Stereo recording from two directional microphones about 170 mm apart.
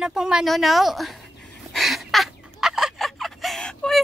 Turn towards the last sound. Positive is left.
turn(degrees=5)  # may be behind; listen again after turning